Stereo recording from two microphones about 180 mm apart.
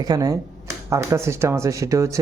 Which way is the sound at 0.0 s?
20° right (ahead or behind).